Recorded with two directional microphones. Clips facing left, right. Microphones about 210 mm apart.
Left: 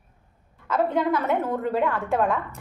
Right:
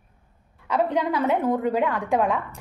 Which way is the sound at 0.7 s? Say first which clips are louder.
Even; 15° right (ahead or behind).